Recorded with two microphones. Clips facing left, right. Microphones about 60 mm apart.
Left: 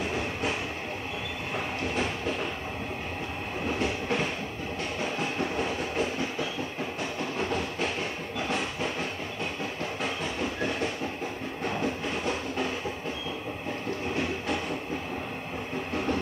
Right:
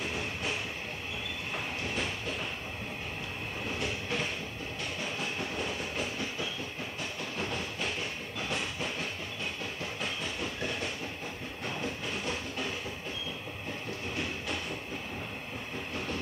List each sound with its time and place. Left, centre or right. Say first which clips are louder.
0.1 s train: left 5 dB; left
3.6 s train: left 7 dB; left
7.3 s train: left 5 dB; left
10.0 s train: left 5 dB; left